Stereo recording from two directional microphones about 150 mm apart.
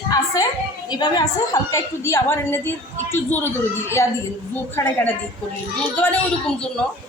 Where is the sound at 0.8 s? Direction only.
25° left (ahead or behind); by 5.1 s 10° left (ahead or behind).